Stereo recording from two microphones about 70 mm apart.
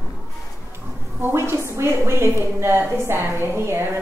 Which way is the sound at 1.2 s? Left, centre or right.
Right.